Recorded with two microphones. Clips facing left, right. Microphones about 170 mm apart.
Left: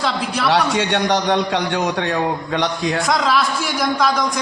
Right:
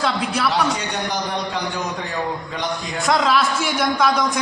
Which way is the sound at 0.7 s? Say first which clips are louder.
Left 7 dB; 85° left.